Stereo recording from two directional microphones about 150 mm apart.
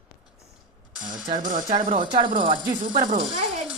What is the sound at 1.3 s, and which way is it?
Speech, 60° right (ahead or behind).